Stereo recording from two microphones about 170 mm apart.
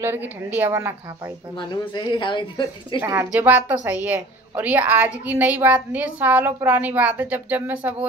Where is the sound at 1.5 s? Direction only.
25° left (ahead or behind).